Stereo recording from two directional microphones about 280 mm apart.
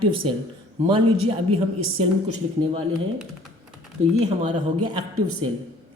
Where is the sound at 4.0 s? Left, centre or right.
Right.